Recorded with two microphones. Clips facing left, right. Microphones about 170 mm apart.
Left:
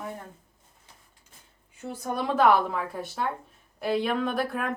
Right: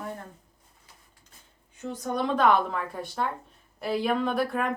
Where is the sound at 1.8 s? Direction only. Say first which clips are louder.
Right 2 dB; 10° left (ahead or behind).